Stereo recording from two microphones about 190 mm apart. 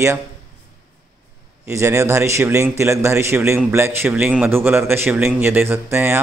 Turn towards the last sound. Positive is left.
turn(degrees=-10)  # may be behind; listen again after turning